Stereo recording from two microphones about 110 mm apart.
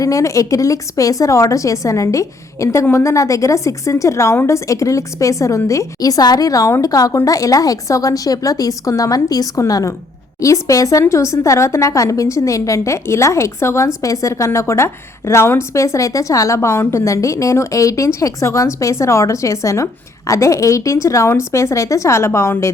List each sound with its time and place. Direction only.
0.0 s a woman's voice: 30° left (ahead or behind)